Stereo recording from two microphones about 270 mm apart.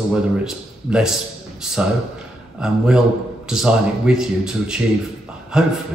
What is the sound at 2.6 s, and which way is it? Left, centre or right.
Speech, centre.